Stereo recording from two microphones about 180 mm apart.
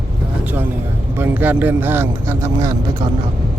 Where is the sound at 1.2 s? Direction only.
10° right (ahead or behind).